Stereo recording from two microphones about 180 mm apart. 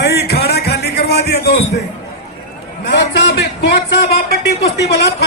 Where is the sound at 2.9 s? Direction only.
65° left (ahead or behind).